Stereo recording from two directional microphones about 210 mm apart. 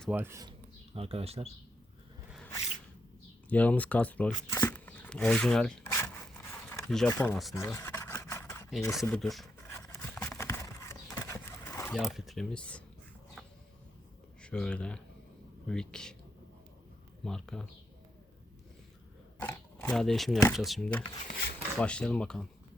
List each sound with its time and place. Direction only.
0.0 s speech: 10° right (ahead or behind)
0.9 s speech: 30° right (ahead or behind)
3.5 s speech: 5° left (ahead or behind)
5.9 s zipper: 10° left (ahead or behind)
7.1 s speech: 15° left (ahead or behind)
7.5 s a sound: 10° left (ahead or behind)
9.0 s speech: centre (ahead or behind)
9.7 s a sound: 10° left (ahead or behind)
11.9 s speech: centre (ahead or behind)
14.4 s speech: 5° left (ahead or behind)
17.2 s speech: centre (ahead or behind)
19.4 s a sound: 5° left (ahead or behind)
20.5 s speech: centre (ahead or behind)